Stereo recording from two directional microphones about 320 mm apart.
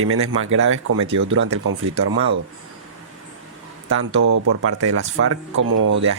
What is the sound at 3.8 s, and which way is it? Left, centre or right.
Speech, right.